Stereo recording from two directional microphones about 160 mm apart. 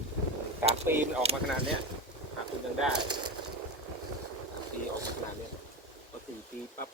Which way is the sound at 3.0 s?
30° right (ahead or behind).